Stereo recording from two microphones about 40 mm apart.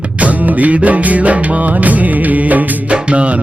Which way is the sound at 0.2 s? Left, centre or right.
Right.